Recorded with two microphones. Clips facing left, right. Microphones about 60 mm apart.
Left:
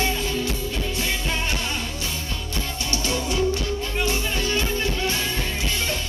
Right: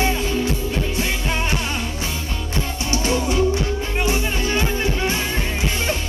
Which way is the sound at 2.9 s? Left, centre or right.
Right.